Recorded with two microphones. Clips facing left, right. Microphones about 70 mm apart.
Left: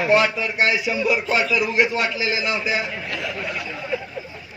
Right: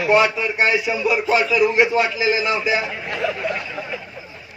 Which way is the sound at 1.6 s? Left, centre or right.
Right.